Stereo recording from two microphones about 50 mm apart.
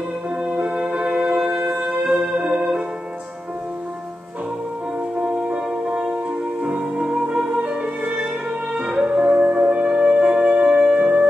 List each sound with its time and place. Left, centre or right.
0.5 s music: right
5.2 s music: centre